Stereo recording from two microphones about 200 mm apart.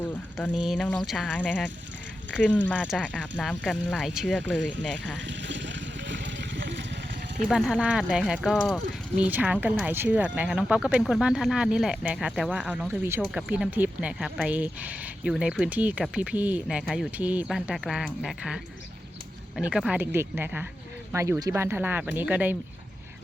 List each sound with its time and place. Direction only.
0.3 s speech: centre (ahead or behind)
2.6 s speech: centre (ahead or behind)
5.2 s a sound: 65° right (ahead or behind)
7.4 s speech: centre (ahead or behind)